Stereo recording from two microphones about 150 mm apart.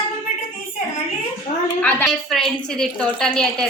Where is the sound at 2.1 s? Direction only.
Centre (ahead or behind).